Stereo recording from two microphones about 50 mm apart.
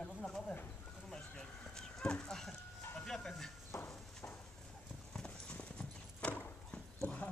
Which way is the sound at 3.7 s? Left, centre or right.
Left.